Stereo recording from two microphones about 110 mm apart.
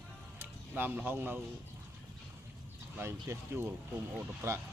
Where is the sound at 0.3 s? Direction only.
15° right (ahead or behind).